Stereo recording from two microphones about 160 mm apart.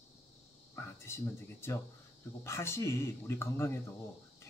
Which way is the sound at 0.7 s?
15° left (ahead or behind).